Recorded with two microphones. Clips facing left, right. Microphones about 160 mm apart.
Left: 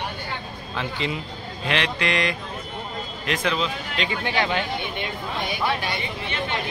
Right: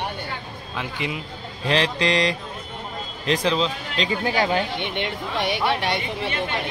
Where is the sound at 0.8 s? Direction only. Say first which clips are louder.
Left 1 dB; 15° right (ahead or behind).